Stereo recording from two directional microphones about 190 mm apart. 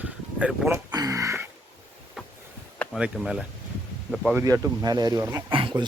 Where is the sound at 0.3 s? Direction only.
5° right (ahead or behind).